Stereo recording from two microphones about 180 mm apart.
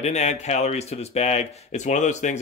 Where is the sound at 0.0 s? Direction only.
40° left (ahead or behind).